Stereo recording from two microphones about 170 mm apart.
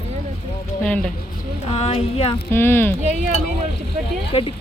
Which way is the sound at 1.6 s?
35° left (ahead or behind).